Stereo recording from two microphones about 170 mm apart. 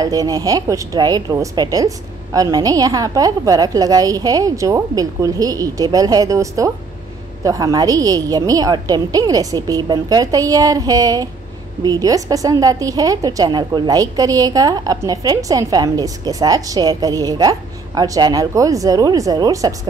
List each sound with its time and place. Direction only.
0.0 s a woman's voice: 20° right (ahead or behind)